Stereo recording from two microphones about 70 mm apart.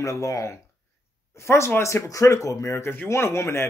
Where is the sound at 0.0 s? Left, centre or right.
Left.